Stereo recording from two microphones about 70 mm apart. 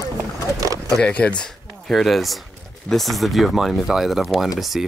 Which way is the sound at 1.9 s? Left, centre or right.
Centre.